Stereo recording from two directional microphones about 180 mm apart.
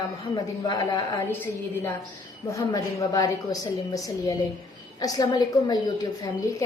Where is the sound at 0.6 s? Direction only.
20° left (ahead or behind).